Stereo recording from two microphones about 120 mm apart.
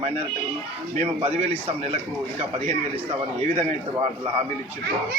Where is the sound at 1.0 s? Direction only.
60° right (ahead or behind).